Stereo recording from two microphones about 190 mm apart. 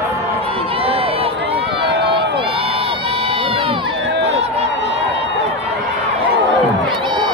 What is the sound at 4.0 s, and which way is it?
Run, 70° right (ahead or behind).